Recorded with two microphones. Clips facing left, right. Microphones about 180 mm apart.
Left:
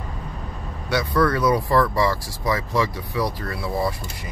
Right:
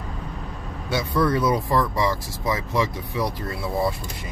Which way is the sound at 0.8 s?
25° right (ahead or behind).